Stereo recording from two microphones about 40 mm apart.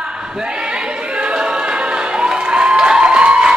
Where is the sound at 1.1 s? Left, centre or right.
Right.